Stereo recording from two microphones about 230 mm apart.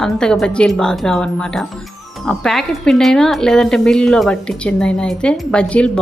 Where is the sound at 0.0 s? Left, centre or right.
Centre.